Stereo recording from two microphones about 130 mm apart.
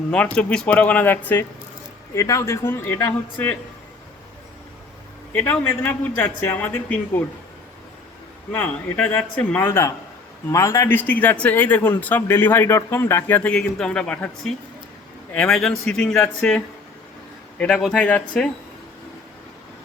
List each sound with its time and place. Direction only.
0.1 s speech: 5° left (ahead or behind)
5.3 s speech: 15° left (ahead or behind)
8.5 s a man's voice: 10° left (ahead or behind)